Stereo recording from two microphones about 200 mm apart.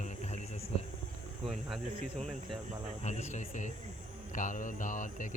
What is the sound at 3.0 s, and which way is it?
A man's voice, 35° left (ahead or behind).